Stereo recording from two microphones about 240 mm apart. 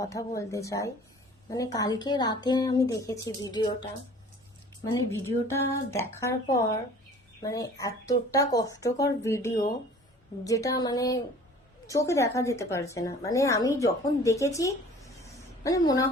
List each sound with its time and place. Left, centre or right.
0.0 s a woman's voice: centre
4.9 s a woman's voice: centre